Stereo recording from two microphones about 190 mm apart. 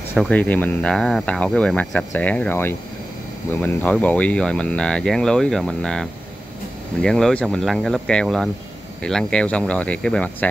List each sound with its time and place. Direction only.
0.1 s speech: 5° left (ahead or behind)